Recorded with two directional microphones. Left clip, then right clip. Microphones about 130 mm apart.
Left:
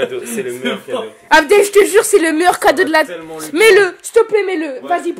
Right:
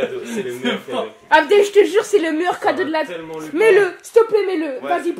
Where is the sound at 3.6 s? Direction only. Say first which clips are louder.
Left 4 dB; 25° left (ahead or behind).